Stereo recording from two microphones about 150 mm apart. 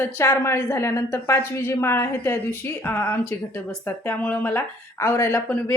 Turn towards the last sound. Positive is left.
turn(degrees=15)  # may be behind; listen again after turning